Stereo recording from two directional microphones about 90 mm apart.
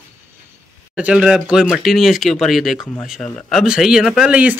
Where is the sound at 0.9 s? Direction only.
15° right (ahead or behind).